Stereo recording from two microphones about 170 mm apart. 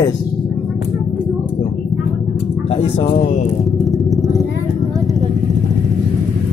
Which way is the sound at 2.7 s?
35° left (ahead or behind).